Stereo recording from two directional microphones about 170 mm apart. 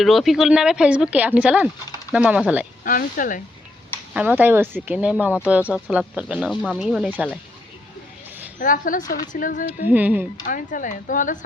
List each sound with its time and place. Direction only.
0.0 s speech: centre (ahead or behind)
2.8 s speech: 55° left (ahead or behind)
4.1 s speech: 10° right (ahead or behind)
8.5 s speech: 50° left (ahead or behind)
9.9 s speech: 10° right (ahead or behind)
10.4 s speech: 50° left (ahead or behind)